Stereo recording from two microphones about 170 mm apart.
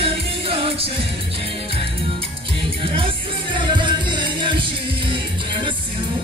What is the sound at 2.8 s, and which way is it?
Music, 30° right (ahead or behind).